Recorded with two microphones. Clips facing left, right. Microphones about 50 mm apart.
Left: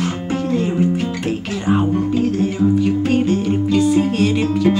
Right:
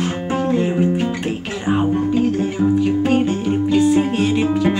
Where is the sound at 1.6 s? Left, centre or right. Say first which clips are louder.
Even; centre.